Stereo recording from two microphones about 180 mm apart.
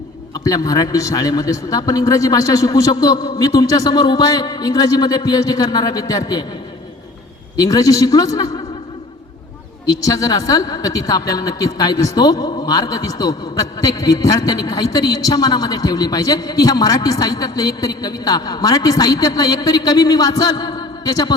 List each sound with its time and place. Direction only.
0.3 s a woman's voice: 20° left (ahead or behind)
7.5 s a woman's voice: 20° left (ahead or behind)
9.8 s a woman's voice: 20° left (ahead or behind)